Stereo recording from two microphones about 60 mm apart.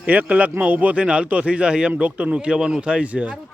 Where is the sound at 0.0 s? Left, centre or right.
Right.